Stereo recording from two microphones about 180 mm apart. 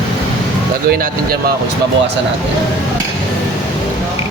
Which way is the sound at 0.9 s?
55° right (ahead or behind).